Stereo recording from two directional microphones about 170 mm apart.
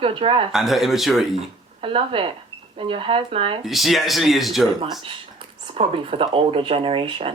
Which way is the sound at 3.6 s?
Centre (ahead or behind).